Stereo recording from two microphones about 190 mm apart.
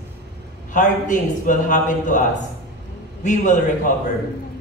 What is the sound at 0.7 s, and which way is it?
A man's voice, 40° left (ahead or behind).